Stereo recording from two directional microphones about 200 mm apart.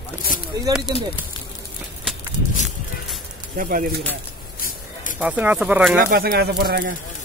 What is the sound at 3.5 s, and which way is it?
Speech, 45° right (ahead or behind).